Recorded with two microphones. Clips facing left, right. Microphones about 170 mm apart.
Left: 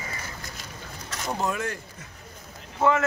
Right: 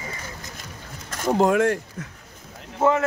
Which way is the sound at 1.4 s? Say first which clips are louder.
Right 11 dB; 80° right.